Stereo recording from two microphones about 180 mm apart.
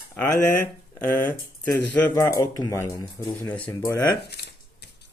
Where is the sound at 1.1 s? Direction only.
10° left (ahead or behind).